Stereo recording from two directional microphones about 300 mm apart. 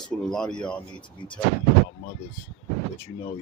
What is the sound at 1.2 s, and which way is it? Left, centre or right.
Speech, centre.